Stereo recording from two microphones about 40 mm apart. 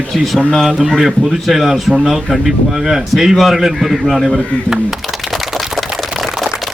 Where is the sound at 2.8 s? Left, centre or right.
Centre.